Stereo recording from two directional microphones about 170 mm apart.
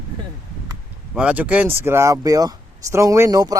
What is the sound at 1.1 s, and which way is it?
Speech, 5° right (ahead or behind).